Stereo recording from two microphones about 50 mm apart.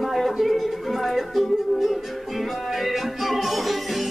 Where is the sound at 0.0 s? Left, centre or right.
Centre.